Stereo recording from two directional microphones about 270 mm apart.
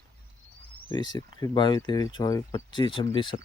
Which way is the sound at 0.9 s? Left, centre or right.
Centre.